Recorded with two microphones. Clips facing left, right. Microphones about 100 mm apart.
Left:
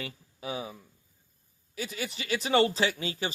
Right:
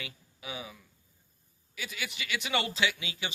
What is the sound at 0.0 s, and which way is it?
Speech, 35° left (ahead or behind).